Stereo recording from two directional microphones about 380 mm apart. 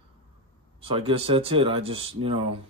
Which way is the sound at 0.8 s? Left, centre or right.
Centre.